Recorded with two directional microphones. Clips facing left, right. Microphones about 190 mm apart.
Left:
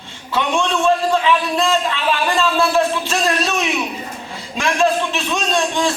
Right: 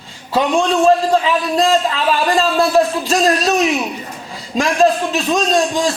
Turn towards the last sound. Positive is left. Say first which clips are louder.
# right 3 dB
turn(degrees=-40)  # may be behind; listen again after turning